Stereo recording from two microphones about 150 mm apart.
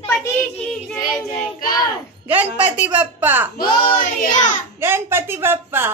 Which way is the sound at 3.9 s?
65° left (ahead or behind).